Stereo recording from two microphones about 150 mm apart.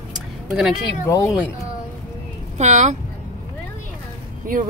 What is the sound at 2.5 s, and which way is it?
Speech, 50° right (ahead or behind).